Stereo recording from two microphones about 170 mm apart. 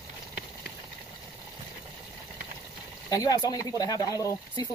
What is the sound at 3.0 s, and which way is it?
Speech, 20° left (ahead or behind).